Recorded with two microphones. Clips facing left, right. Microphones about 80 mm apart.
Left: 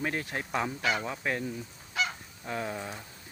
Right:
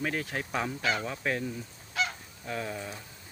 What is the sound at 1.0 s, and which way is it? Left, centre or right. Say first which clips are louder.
Goose: even; centre.